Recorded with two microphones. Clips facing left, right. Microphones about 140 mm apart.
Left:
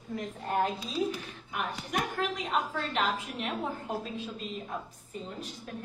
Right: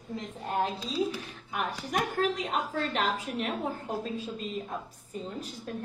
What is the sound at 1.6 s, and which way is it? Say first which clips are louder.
Speech: right 2 dB; 35° right (ahead or behind).